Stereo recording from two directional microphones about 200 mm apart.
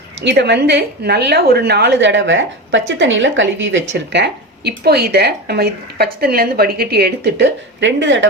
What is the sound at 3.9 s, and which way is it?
Speech, 55° right (ahead or behind).